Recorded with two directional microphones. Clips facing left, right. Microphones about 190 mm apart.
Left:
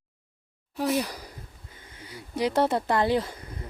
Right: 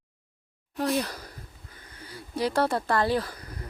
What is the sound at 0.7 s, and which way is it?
Speech, 5° left (ahead or behind).